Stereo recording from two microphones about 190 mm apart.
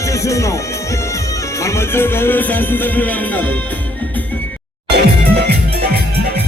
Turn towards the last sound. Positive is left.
turn(degrees=-60)  # may be behind; listen again after turning